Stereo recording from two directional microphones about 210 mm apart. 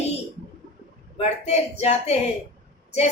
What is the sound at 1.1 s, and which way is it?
Speech, 30° left (ahead or behind).